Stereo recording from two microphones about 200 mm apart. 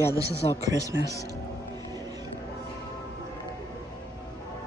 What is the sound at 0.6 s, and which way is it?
Speech, 15° right (ahead or behind).